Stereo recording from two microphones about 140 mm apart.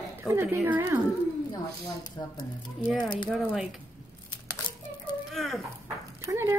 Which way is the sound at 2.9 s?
30° left (ahead or behind).